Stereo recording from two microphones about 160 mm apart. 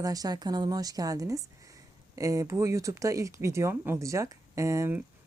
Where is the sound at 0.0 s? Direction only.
20° right (ahead or behind).